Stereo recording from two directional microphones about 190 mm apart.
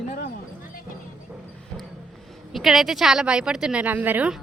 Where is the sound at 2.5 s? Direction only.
Centre (ahead or behind).